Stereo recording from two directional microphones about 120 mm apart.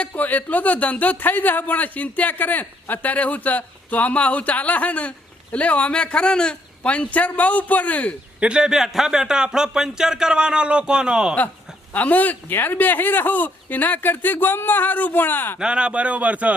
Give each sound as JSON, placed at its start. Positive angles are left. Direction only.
{"t": 0.0, "sound": "a man's voice", "side_deg": 15}
{"t": 8.4, "sound": "a man's voice", "side_deg": -10}
{"t": 11.9, "sound": "a man's voice", "side_deg": 15}
{"t": 15.5, "sound": "a man's voice", "side_deg": -10}